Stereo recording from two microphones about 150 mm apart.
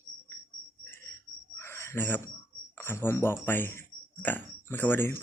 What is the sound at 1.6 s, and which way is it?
Bird, 15° left (ahead or behind).